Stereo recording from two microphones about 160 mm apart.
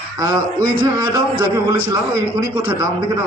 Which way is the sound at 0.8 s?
30° right (ahead or behind).